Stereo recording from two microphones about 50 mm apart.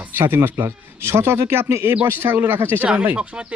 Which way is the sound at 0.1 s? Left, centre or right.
Right.